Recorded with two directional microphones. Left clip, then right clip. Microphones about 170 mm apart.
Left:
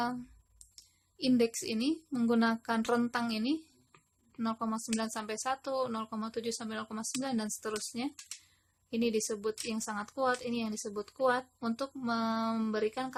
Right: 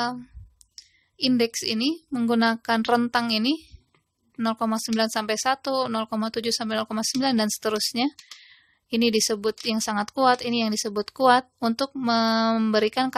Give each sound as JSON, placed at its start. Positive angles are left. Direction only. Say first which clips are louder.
{"t": 0.0, "sound": "speech", "louder": "right 7 dB", "side_deg": -30}